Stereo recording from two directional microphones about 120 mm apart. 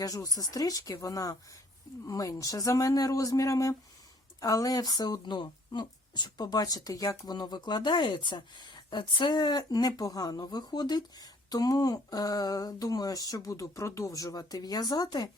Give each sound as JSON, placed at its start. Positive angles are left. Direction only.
{"t": 0.0, "sound": "speech", "side_deg": 30}